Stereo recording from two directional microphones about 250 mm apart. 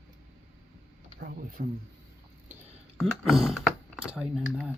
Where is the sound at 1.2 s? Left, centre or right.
Right.